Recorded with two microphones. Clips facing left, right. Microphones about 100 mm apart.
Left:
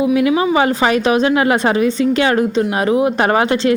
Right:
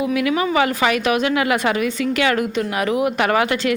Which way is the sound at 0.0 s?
25° left (ahead or behind).